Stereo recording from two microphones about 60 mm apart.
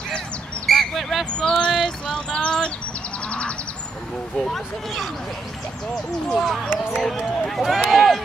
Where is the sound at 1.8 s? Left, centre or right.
Centre.